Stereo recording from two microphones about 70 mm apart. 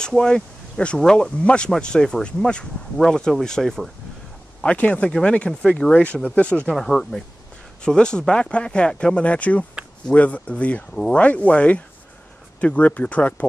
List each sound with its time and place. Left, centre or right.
0.0 s speech: centre
4.6 s speech: centre
6.7 s speech: centre